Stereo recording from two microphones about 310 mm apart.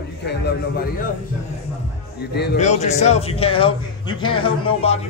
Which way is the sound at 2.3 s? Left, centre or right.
Left.